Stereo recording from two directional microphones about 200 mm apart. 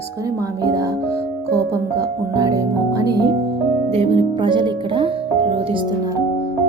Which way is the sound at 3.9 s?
30° right (ahead or behind).